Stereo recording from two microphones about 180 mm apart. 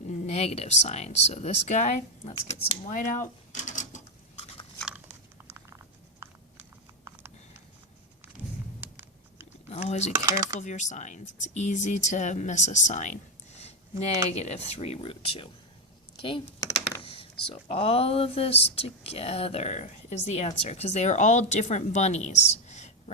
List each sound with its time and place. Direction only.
0.1 s speech: 35° left (ahead or behind)
3.5 s mechanisms: 45° left (ahead or behind)
4.9 s chewing: 5° right (ahead or behind)
6.1 s a sound: 15° right (ahead or behind)
8.8 s a sound: 10° right (ahead or behind)
9.6 s speech: 35° left (ahead or behind)
10.2 s speech: 20° right (ahead or behind)
10.6 s speech: 40° left (ahead or behind)
16.6 s computer keyboard: 20° left (ahead or behind)
17.0 s a sound: 30° left (ahead or behind)
17.5 s speech: 30° left (ahead or behind)